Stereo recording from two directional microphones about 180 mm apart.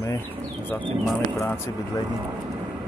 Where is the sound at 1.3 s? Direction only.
15° left (ahead or behind).